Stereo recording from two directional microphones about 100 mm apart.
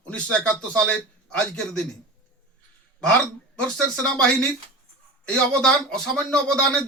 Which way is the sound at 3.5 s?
10° left (ahead or behind).